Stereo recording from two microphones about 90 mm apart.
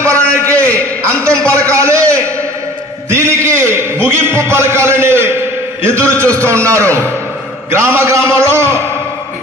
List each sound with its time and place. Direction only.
0.0 s a sound: 30° right (ahead or behind)
5.9 s a man's voice: 30° right (ahead or behind)
6.1 s a man's voice: 15° left (ahead or behind)
6.4 s a man's voice: 30° right (ahead or behind)